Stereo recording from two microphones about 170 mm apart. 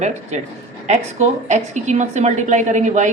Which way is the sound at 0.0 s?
40° right (ahead or behind).